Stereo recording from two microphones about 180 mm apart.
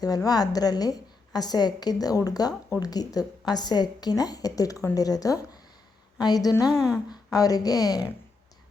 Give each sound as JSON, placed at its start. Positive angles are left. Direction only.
{"t": 0.3, "sound": "a woman's voice", "side_deg": 20}
{"t": 6.7, "sound": "speech", "side_deg": -5}
{"t": 7.1, "sound": "a woman's voice", "side_deg": 20}